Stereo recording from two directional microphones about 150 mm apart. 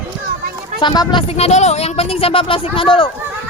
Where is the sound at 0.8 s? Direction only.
30° left (ahead or behind).